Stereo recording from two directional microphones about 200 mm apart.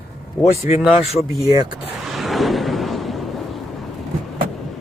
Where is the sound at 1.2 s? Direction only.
20° right (ahead or behind).